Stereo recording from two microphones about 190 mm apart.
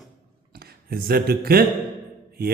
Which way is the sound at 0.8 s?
50° right (ahead or behind).